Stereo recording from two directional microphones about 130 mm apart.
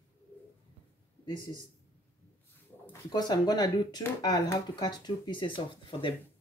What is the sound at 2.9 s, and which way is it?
Speech, 30° left (ahead or behind).